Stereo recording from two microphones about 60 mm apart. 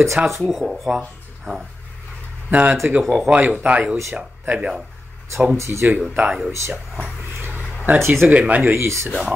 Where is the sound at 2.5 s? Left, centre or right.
Right.